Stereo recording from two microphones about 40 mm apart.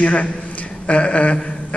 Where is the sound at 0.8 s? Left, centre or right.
Left.